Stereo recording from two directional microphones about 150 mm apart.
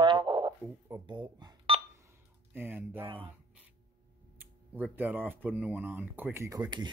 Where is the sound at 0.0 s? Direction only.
30° right (ahead or behind).